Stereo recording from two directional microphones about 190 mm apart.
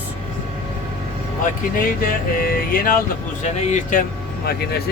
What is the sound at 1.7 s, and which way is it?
Music, 50° left (ahead or behind).